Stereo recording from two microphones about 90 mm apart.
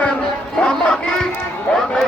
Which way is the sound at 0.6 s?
10° left (ahead or behind).